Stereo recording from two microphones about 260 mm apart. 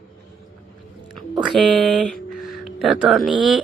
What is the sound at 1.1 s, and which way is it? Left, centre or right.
Music, centre.